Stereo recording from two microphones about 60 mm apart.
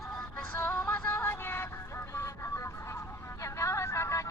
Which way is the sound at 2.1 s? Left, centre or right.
Left.